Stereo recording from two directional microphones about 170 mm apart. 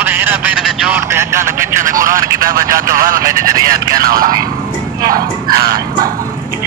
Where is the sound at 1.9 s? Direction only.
55° right (ahead or behind).